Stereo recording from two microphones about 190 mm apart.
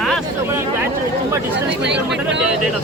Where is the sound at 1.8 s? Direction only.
65° right (ahead or behind).